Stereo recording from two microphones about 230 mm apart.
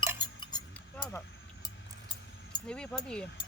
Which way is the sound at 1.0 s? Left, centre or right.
Centre.